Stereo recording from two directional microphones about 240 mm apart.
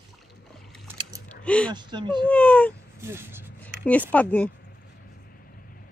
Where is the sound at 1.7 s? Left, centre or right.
Centre.